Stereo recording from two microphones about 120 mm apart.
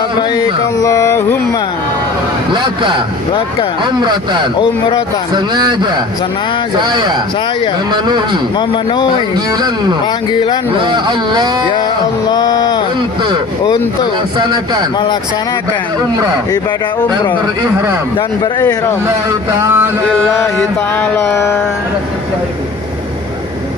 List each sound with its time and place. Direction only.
0.3 s music: 30° left (ahead or behind)
2.5 s speech: 45° right (ahead or behind)
5.5 s speech: 35° right (ahead or behind)
8.5 s speech: 40° left (ahead or behind)
9.5 s speech: 35° right (ahead or behind)
10.8 s speech: 40° right (ahead or behind)
12.3 s speech: 35° left (ahead or behind)
14.3 s speech: 35° right (ahead or behind)
19.5 s a sound: 20° right (ahead or behind)
20.9 s music: 20° left (ahead or behind)